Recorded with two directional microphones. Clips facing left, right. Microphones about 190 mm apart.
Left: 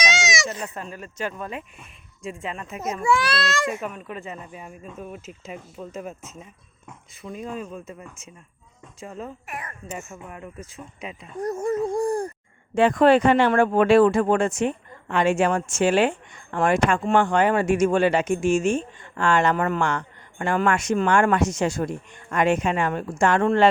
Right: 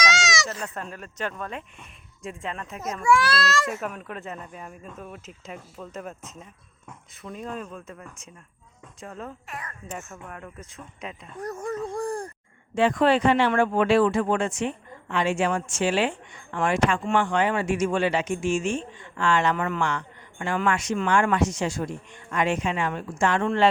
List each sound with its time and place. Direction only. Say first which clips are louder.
0.0 s sheep: left 1 dB; 20° left (ahead or behind)
0.5 s a child's voice: left 2 dB; 20° left (ahead or behind)
0.8 s speech: left 1 dB; 5° left (ahead or behind)
3.0 s a child's voice: right 1 dB; 20° left (ahead or behind)
3.8 s speech: left 1 dB; centre (ahead or behind)
9.5 s a child's voice: left 3 dB; 20° left (ahead or behind)
10.0 s speech: left 2 dB; 10° left (ahead or behind)
11.3 s a sound: left 7 dB; 25° left (ahead or behind)
12.7 s speech: left 4 dB; 50° left (ahead or behind)